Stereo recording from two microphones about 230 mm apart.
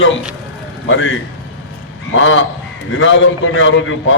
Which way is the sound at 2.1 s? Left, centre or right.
Left.